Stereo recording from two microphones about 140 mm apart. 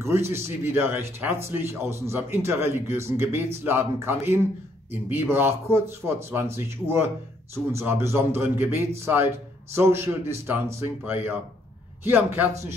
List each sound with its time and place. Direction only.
0.3 s a man's voice: 15° right (ahead or behind)